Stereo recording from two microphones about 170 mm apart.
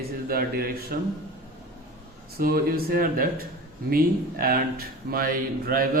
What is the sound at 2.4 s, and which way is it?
Speech, 60° right (ahead or behind).